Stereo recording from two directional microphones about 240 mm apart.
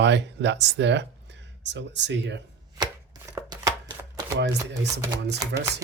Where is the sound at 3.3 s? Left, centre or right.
Centre.